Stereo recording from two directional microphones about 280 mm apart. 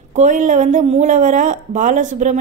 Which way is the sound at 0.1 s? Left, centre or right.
Right.